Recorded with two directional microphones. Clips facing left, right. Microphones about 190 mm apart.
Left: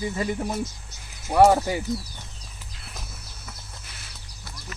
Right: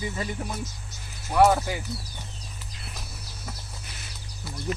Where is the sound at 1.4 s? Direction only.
30° left (ahead or behind).